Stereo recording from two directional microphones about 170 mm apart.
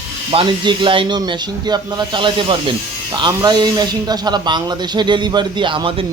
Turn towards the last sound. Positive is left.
turn(degrees=-30)  # may be behind; listen again after turning